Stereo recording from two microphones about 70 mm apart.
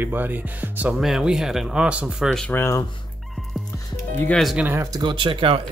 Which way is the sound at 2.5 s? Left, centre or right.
Left.